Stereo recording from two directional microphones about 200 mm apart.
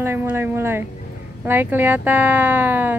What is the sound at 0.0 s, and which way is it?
Speech, 10° right (ahead or behind).